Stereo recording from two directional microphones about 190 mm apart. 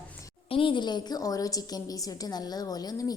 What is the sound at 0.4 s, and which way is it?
A woman's voice, 30° left (ahead or behind).